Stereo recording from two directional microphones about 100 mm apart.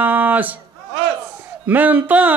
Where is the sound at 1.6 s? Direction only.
15° right (ahead or behind).